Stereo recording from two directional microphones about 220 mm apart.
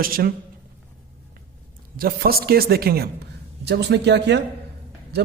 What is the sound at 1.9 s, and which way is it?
A man's voice, 45° right (ahead or behind).